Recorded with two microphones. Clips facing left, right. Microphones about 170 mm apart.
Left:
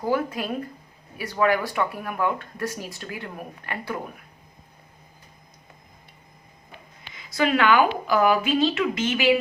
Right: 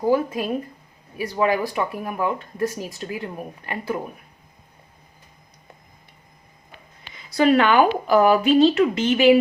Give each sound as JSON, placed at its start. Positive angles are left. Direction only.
{"t": 0.0, "sound": "speech", "side_deg": -20}
{"t": 7.3, "sound": "a woman's voice", "side_deg": -35}